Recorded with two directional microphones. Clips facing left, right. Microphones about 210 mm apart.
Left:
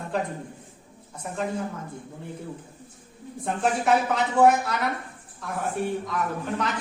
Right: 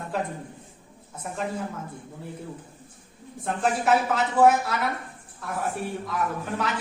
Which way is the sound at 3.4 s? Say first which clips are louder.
Even; centre (ahead or behind).